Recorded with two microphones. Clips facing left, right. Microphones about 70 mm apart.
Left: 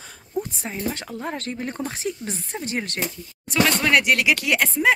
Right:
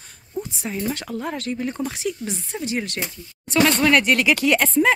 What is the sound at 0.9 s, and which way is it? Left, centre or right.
Speech, left.